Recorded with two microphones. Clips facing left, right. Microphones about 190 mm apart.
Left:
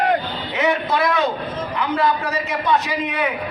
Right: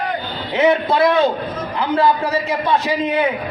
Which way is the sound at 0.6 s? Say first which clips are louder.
Right 5 dB; 30° right (ahead or behind).